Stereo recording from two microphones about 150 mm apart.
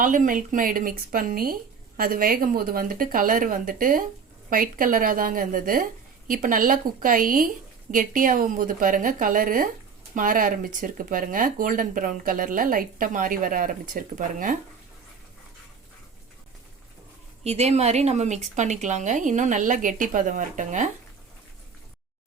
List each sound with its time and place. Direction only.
0.0 s speech: 60° right (ahead or behind)
17.4 s speech: 45° right (ahead or behind)